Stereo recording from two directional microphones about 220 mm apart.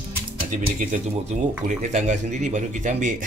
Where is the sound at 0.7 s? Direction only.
35° right (ahead or behind).